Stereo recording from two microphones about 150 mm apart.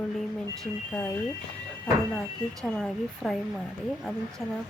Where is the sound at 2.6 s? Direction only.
Centre (ahead or behind).